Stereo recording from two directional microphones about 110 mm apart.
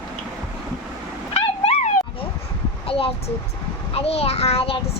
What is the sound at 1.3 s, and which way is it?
Dog, 70° left (ahead or behind).